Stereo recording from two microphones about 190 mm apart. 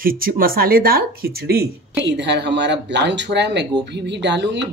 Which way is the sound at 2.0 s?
65° right (ahead or behind).